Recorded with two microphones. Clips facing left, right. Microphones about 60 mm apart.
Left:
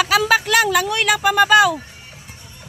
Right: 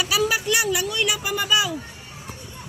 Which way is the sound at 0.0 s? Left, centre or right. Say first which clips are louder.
Left 6 dB; left.